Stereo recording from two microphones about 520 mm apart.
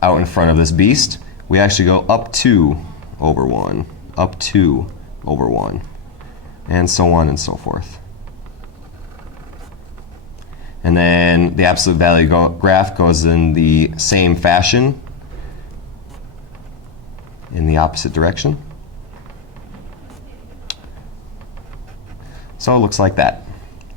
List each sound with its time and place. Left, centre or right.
0.0 s speech: left
10.8 s speech: left
17.5 s speech: left
20.7 s a sound: left
22.5 s speech: left